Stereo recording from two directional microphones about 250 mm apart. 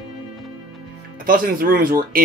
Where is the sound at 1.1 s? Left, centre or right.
Right.